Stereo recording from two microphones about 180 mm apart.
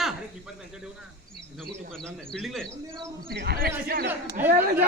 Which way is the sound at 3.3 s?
60° right (ahead or behind).